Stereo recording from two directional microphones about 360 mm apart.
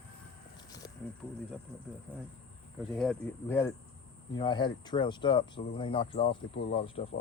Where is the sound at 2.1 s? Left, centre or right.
Centre.